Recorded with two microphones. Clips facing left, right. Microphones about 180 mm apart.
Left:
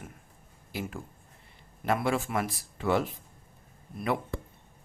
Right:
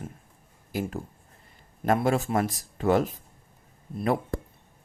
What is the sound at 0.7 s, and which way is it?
Speech, 45° right (ahead or behind).